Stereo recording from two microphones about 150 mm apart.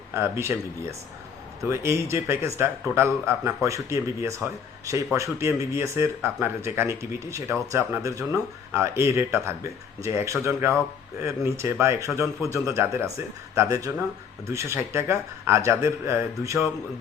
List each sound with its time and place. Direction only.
0.1 s speech: 15° right (ahead or behind)